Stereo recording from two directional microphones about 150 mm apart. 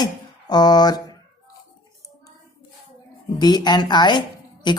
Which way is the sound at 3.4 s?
30° left (ahead or behind).